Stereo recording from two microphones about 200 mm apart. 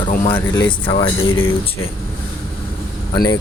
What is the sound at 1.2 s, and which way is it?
Speech, 90° left.